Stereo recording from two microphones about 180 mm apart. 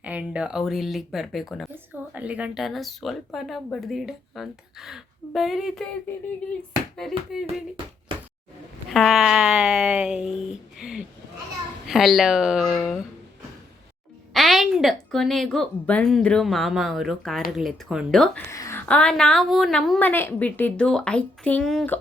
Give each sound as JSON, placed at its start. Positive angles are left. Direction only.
{"t": 0.0, "sound": "a woman's voice", "side_deg": -10}
{"t": 7.0, "sound": "a woman's voice", "side_deg": 0}
{"t": 8.9, "sound": "a woman's voice", "side_deg": 0}
{"t": 14.3, "sound": "a woman's voice", "side_deg": 0}
{"t": 18.5, "sound": "a sound", "side_deg": 20}
{"t": 18.9, "sound": "a woman's voice", "side_deg": 5}